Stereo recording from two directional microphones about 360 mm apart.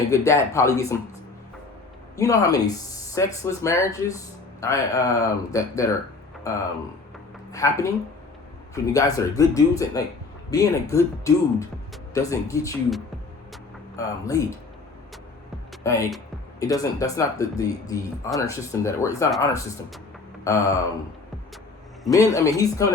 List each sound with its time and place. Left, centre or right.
0.1 s speech: centre
2.1 s speech: centre
13.5 s a sound: centre
15.8 s speech: centre
22.0 s speech: centre